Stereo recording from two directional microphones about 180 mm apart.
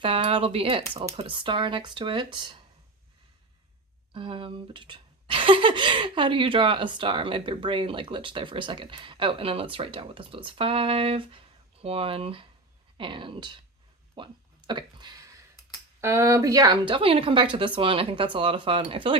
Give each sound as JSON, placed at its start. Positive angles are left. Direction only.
{"t": 0.0, "sound": "speech", "side_deg": -30}
{"t": 4.1, "sound": "speech", "side_deg": -30}
{"t": 14.7, "sound": "a sound", "side_deg": -25}
{"t": 16.0, "sound": "speech", "side_deg": -15}